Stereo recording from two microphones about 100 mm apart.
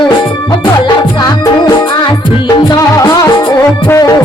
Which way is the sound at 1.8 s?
55° left (ahead or behind).